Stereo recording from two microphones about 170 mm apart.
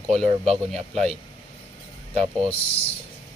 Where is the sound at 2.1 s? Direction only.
40° right (ahead or behind).